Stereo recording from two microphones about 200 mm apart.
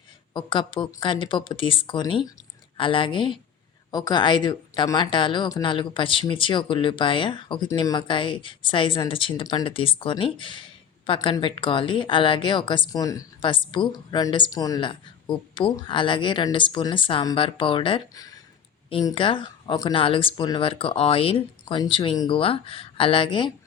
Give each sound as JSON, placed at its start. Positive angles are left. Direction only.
{"t": 0.3, "sound": "a woman's voice", "side_deg": 25}